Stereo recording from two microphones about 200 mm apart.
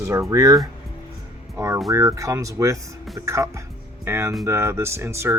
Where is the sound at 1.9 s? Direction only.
15° right (ahead or behind).